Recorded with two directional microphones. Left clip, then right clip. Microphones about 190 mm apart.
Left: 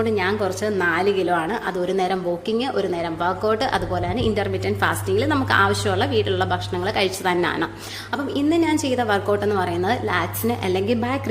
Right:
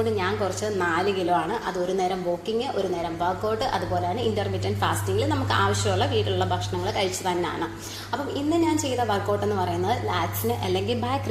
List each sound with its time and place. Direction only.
0.0 s a woman's voice: 35° left (ahead or behind)